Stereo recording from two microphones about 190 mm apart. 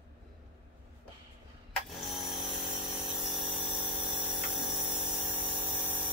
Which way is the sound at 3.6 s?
25° right (ahead or behind).